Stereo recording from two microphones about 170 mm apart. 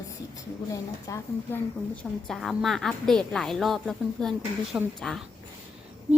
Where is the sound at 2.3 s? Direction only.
Centre (ahead or behind).